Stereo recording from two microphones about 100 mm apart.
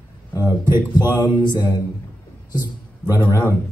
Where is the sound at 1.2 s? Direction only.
45° left (ahead or behind).